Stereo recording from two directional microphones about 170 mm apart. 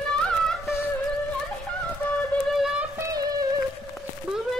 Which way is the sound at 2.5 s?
5° right (ahead or behind).